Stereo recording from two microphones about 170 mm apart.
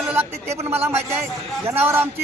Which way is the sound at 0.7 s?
10° right (ahead or behind).